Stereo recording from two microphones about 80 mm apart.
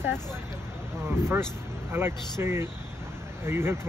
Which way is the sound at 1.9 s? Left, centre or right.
Right.